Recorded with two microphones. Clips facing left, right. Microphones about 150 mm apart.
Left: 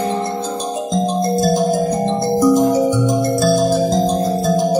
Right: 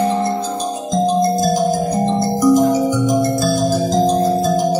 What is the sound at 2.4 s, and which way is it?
Music, 30° left (ahead or behind).